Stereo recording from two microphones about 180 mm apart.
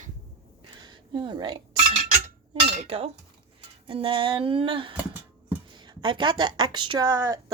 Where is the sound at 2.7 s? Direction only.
35° right (ahead or behind).